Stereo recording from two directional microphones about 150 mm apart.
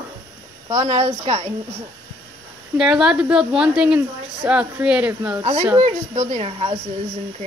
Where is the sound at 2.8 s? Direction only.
5° right (ahead or behind).